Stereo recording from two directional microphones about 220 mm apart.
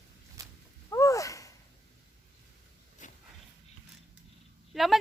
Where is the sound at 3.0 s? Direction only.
35° left (ahead or behind).